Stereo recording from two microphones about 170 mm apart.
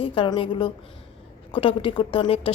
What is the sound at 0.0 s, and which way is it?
A woman's voice, 30° left (ahead or behind).